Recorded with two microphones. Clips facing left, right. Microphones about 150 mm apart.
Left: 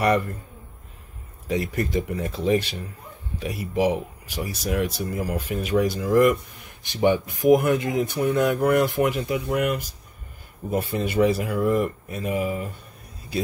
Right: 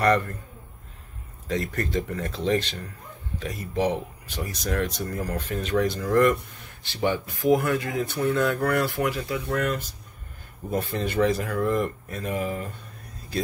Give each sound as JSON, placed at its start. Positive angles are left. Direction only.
{"t": 0.0, "sound": "speech", "side_deg": 10}
{"t": 1.5, "sound": "speech", "side_deg": 10}